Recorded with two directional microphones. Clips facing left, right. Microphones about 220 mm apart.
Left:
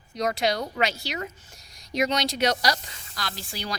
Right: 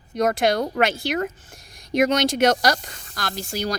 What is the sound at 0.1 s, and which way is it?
A woman's voice, 50° right (ahead or behind).